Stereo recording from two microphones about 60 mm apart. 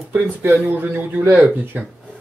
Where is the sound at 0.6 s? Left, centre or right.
Right.